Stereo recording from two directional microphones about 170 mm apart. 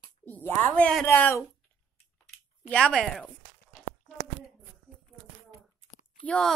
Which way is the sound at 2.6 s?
5° left (ahead or behind).